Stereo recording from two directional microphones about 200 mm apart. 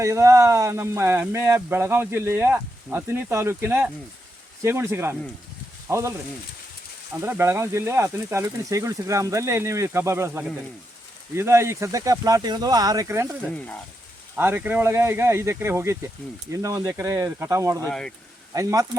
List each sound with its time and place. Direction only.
0.0 s speech: 15° right (ahead or behind)
7.2 s speech: 10° right (ahead or behind)
13.5 s speech: 5° left (ahead or behind)
14.3 s speech: 10° right (ahead or behind)
17.8 s speech: 5° left (ahead or behind)
18.5 s speech: 15° right (ahead or behind)